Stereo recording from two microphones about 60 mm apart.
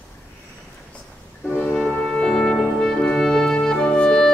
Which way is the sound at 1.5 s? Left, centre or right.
Left.